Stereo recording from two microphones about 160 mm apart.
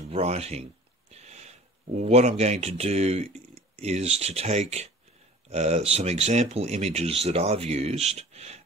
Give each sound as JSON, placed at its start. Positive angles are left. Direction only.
{"t": 0.1, "sound": "speech", "side_deg": -40}